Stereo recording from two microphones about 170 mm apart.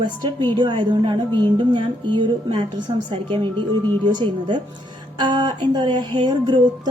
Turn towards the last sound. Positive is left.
turn(degrees=-25)  # may be behind; listen again after turning